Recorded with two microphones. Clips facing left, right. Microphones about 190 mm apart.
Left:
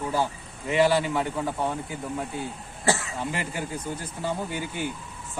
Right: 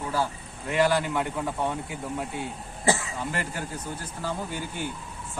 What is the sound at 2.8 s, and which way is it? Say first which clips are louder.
Speech: even; 20° right (ahead or behind).